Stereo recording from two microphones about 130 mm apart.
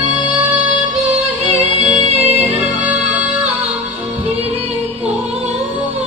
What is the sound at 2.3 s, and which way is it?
Music, 60° right (ahead or behind).